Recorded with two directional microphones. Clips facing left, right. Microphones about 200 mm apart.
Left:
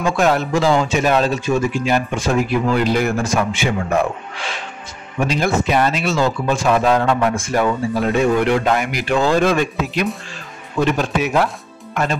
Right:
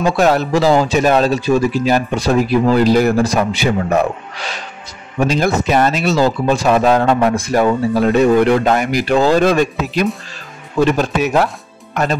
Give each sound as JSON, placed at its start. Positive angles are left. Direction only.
{"t": 0.0, "sound": "speech", "side_deg": -35}
{"t": 11.9, "sound": "speech", "side_deg": -40}